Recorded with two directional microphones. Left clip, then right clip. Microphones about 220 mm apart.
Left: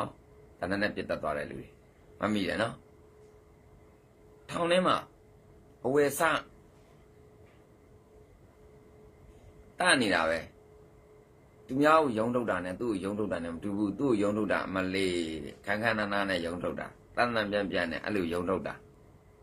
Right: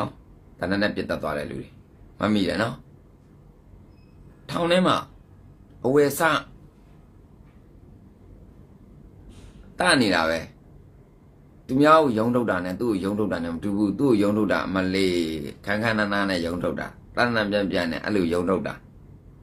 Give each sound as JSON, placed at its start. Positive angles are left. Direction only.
{"t": 0.6, "sound": "speech", "side_deg": -5}
{"t": 4.5, "sound": "a man's voice", "side_deg": -5}
{"t": 9.8, "sound": "speech", "side_deg": -5}
{"t": 11.7, "sound": "speech", "side_deg": -5}